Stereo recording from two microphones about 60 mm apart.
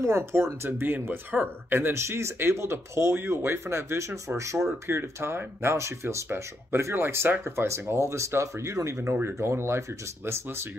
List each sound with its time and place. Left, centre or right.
0.0 s speech: right
0.7 s speech: right
4.8 s speech: right